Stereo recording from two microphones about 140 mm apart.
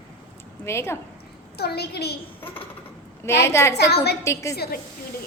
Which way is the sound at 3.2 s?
20° left (ahead or behind).